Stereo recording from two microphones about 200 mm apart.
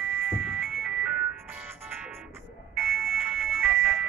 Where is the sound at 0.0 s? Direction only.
5° right (ahead or behind).